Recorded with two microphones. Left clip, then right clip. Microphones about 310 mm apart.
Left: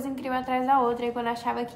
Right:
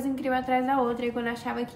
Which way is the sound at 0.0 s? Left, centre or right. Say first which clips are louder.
Right 2 dB; centre.